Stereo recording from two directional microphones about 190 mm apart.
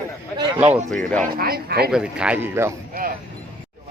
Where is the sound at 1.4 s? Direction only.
55° right (ahead or behind).